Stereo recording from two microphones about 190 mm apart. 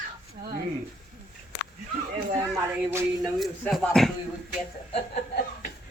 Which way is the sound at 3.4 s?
Centre (ahead or behind).